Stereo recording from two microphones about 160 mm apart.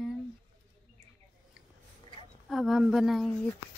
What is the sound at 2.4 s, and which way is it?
Speech, centre (ahead or behind).